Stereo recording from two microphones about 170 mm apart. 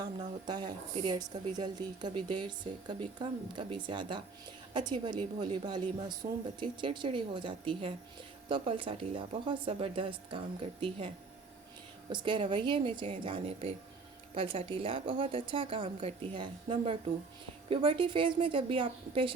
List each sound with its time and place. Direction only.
0.2 s a woman's voice: 25° right (ahead or behind)